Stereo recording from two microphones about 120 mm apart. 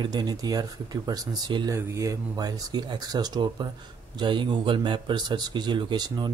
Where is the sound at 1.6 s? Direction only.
25° right (ahead or behind).